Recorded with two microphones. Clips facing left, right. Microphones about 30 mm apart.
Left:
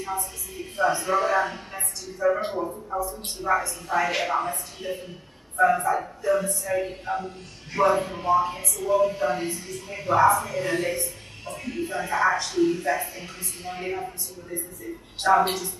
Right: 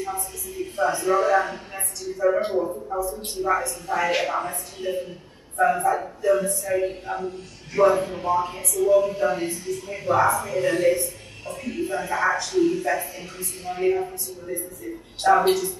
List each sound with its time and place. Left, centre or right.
0.7 s speech: centre
14.5 s speech: centre
15.2 s speech: centre